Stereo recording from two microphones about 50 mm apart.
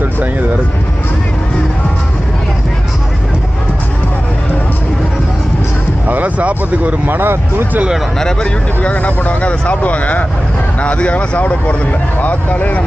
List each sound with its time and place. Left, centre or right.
6.1 s speech: right
7.0 s speech: right
8.2 s speech: centre; by 12.8 s left